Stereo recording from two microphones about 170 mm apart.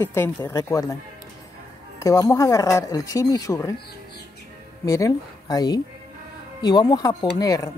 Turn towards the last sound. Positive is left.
turn(degrees=20)  # may be behind; listen again after turning